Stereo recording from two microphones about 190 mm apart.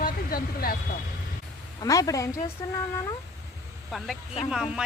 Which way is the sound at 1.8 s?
15° left (ahead or behind).